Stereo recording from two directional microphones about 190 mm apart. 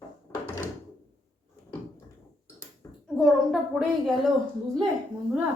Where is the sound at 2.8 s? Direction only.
15° left (ahead or behind).